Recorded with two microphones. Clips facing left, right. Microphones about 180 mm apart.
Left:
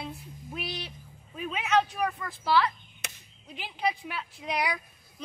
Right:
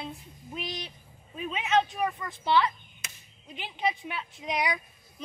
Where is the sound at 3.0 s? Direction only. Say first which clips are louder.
Left 5 dB; 70° left (ahead or behind).